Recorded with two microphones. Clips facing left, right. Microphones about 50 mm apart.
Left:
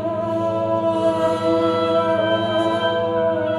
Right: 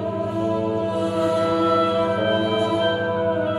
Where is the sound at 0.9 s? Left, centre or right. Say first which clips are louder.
Left 3 dB; centre.